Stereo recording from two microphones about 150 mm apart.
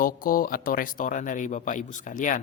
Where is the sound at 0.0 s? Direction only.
70° left (ahead or behind).